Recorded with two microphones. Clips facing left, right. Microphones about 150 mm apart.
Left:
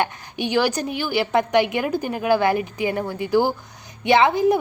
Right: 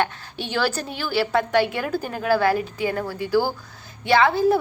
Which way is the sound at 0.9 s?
15° left (ahead or behind).